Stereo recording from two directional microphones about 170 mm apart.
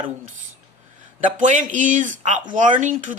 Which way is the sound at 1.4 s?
50° right (ahead or behind).